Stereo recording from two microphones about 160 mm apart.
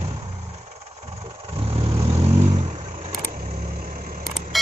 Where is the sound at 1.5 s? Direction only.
40° right (ahead or behind).